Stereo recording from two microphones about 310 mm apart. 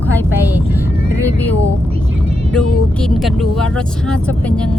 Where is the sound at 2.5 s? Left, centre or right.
Centre.